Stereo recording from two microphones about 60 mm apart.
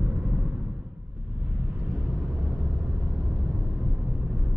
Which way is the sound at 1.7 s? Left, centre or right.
Centre.